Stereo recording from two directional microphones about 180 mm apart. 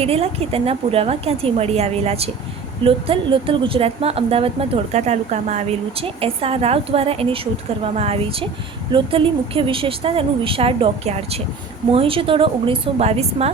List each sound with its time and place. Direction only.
0.0 s a woman's voice: 35° right (ahead or behind)